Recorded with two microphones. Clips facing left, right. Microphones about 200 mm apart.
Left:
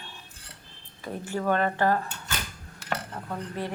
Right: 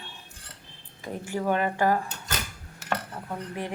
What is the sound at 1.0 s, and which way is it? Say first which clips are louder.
Speech: even; 15° right (ahead or behind).